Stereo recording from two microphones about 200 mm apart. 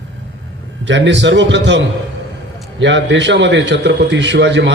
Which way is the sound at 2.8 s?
65° right (ahead or behind).